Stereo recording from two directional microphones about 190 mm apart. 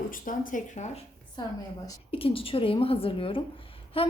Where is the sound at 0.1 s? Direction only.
45° left (ahead or behind).